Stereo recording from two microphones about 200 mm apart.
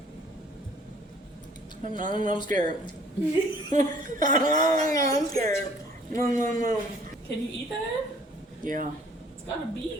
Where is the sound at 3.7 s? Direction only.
40° right (ahead or behind).